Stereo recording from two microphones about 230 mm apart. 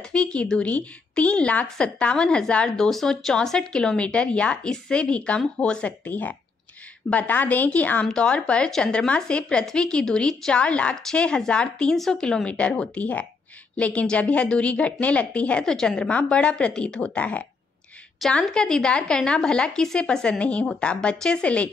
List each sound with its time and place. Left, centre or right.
0.1 s a woman's voice: centre